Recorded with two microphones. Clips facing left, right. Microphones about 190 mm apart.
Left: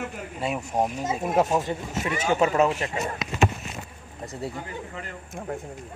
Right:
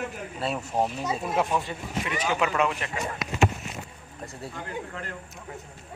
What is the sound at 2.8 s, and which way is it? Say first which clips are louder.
Speech: left 3 dB; 25° left (ahead or behind).